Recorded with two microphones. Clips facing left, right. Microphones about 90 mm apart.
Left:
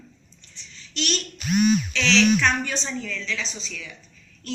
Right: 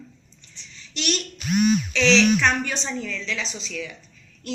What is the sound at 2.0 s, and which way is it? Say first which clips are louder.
A woman's voice: right 2 dB; 15° right (ahead or behind).